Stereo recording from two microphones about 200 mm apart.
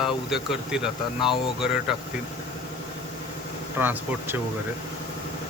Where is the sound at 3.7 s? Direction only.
10° right (ahead or behind).